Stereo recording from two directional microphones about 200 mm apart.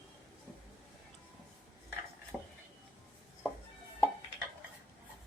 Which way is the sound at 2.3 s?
5° right (ahead or behind).